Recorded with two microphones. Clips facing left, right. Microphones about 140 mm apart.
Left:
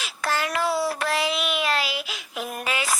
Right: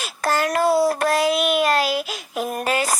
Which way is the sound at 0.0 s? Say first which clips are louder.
Right 5 dB; 45° right (ahead or behind).